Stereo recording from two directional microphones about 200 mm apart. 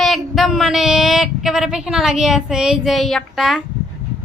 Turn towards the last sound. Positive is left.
turn(degrees=0)  # may be behind; listen again after turning